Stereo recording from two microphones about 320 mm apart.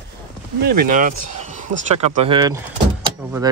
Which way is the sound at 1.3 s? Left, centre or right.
Right.